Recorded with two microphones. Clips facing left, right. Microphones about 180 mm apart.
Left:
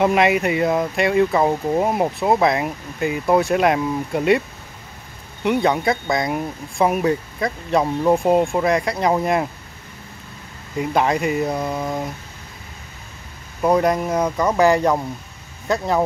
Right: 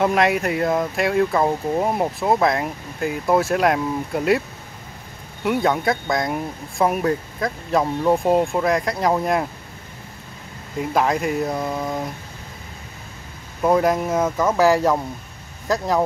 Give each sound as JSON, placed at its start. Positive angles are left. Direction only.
{"t": 0.0, "sound": "speech", "side_deg": 0}
{"t": 5.4, "sound": "speech", "side_deg": 0}
{"t": 10.8, "sound": "speech", "side_deg": 0}
{"t": 13.6, "sound": "speech", "side_deg": 0}